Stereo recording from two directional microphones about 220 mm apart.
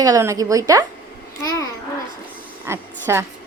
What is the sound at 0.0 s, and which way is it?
Speech, 15° right (ahead or behind).